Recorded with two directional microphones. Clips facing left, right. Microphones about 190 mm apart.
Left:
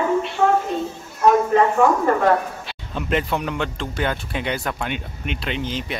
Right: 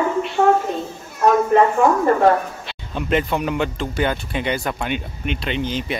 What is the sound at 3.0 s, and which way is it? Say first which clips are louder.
Speech: right 2 dB; centre (ahead or behind).